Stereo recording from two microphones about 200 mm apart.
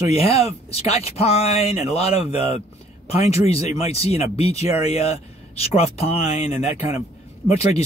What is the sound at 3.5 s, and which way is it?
Speech, 30° left (ahead or behind).